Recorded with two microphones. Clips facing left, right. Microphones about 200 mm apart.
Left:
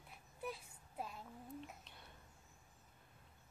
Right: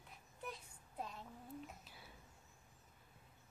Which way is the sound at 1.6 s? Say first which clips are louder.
Even; 5° right (ahead or behind).